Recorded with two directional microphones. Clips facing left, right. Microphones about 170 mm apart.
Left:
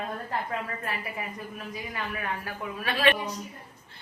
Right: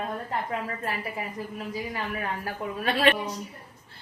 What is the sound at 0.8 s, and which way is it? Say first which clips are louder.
A woman's voice: right 2 dB; 30° right (ahead or behind).